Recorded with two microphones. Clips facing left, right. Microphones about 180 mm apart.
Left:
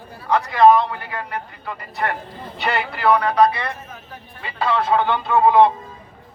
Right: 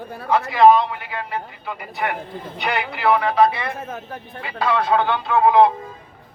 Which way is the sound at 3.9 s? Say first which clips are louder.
Right 7 dB; 50° right (ahead or behind).